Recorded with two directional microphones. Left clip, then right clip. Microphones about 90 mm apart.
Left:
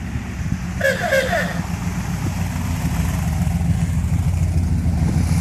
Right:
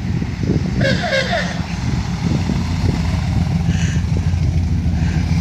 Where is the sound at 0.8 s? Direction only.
Centre (ahead or behind).